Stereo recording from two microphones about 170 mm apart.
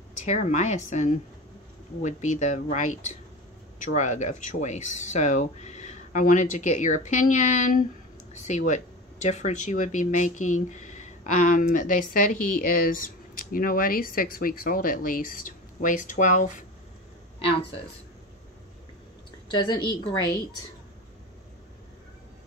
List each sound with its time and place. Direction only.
0.2 s speech: 45° left (ahead or behind)
19.5 s a woman's voice: 25° left (ahead or behind)